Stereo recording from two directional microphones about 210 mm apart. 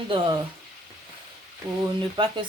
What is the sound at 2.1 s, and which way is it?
Speech, 25° right (ahead or behind).